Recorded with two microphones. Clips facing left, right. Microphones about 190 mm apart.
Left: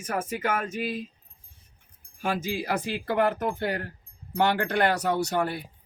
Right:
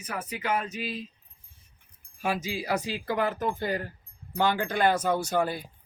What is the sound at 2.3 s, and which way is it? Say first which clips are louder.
Speech: left 2 dB; 55° left (ahead or behind).